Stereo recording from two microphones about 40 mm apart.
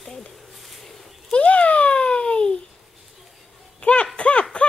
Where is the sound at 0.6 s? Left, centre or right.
Centre.